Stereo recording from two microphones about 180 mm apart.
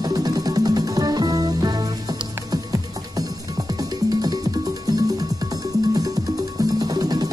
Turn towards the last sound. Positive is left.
turn(degrees=-20)  # may be behind; listen again after turning